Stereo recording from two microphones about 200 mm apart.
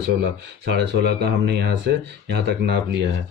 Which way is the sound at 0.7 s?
55° right (ahead or behind).